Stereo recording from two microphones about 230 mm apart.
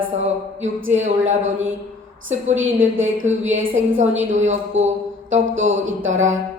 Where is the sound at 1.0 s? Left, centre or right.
Right.